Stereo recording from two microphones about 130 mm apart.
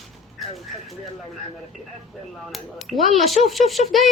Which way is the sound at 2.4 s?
Centre (ahead or behind).